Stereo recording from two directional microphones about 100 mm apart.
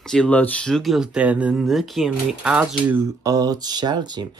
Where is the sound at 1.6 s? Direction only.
Centre (ahead or behind).